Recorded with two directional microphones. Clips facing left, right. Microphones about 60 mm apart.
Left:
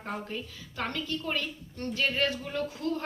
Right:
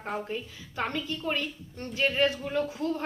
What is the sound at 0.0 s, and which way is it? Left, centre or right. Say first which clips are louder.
A man's voice: right 3 dB; centre.